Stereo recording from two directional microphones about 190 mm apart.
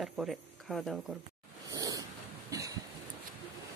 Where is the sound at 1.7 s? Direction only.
20° right (ahead or behind).